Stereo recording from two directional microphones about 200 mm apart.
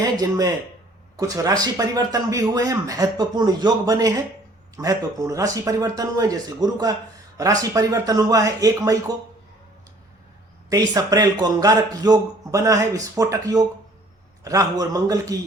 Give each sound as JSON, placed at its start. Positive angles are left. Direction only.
{"t": 0.0, "sound": "speech", "side_deg": -20}
{"t": 10.7, "sound": "speech", "side_deg": -20}